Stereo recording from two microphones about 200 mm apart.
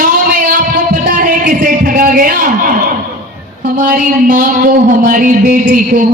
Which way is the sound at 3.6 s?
45° right (ahead or behind).